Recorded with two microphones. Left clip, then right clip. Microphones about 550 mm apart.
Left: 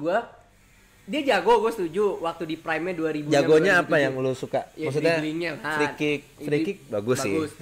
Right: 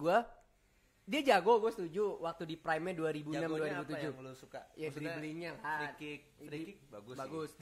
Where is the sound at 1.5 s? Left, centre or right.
Right.